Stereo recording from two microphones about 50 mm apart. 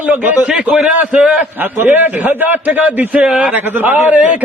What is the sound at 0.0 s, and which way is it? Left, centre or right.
Speech, right.